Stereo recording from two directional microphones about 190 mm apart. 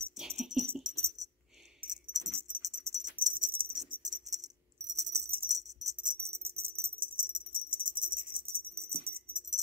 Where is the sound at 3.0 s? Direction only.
45° right (ahead or behind).